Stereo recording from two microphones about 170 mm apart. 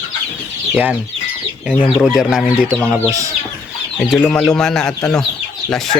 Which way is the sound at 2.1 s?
5° right (ahead or behind).